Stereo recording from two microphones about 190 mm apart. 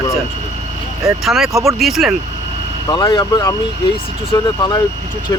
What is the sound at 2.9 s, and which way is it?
Speech, 20° left (ahead or behind).